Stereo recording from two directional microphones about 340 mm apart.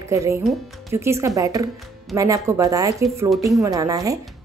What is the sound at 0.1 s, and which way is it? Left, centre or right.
Speech, centre.